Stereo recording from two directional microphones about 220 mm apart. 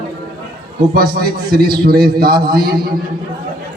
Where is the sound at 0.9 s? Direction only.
45° right (ahead or behind).